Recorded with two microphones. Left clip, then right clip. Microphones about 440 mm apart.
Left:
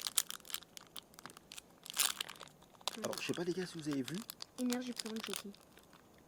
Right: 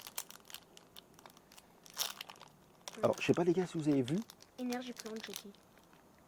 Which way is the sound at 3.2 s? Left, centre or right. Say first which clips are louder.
Right 7 dB; right.